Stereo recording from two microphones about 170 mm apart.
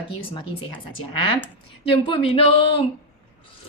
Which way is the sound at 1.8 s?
30° left (ahead or behind).